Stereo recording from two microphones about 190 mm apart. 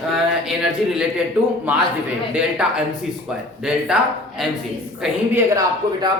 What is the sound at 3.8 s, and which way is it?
Speech, 5° right (ahead or behind).